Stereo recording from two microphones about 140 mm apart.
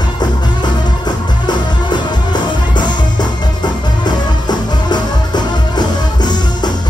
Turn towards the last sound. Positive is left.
turn(degrees=30)  # may be behind; listen again after turning